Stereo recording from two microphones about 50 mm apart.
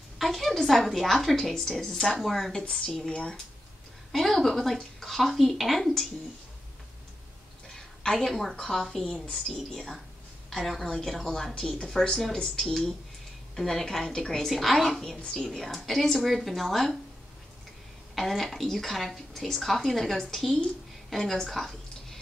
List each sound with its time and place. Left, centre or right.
0.2 s a woman's voice: centre
2.5 s a woman's voice: centre
4.1 s a woman's voice: centre
7.7 s a sound: centre
8.3 s a woman's voice: centre
9.6 s a woman's voice: centre
18.1 s a woman's voice: centre
21.1 s a sound: centre